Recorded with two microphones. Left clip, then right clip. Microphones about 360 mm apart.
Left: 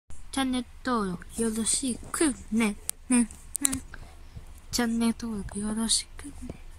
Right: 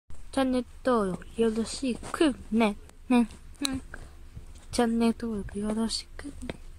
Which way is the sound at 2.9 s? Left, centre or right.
Left.